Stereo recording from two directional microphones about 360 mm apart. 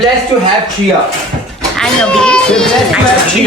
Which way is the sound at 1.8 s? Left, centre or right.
Centre.